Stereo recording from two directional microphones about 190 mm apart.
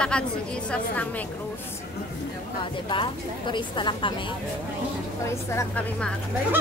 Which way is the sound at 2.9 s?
25° left (ahead or behind).